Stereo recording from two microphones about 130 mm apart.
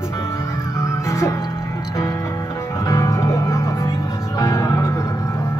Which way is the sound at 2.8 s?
25° left (ahead or behind).